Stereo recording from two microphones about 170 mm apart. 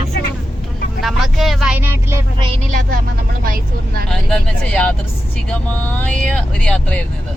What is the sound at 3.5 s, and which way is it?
Speech, 55° right (ahead or behind).